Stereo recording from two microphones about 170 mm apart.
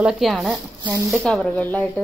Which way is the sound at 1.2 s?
5° left (ahead or behind).